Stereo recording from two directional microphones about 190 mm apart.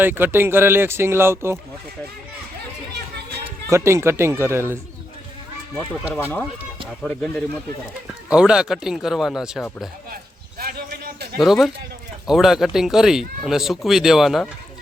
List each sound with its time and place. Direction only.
0.0 s speech: 10° right (ahead or behind)
3.7 s speech: 15° right (ahead or behind)
7.0 s speech: 5° left (ahead or behind)
10.6 s a sound: 50° right (ahead or behind)
11.3 s speech: centre (ahead or behind)